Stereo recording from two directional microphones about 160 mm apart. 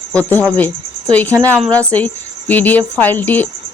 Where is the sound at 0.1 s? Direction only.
10° left (ahead or behind).